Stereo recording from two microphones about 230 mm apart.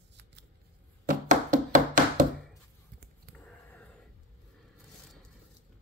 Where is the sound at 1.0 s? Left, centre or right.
Right.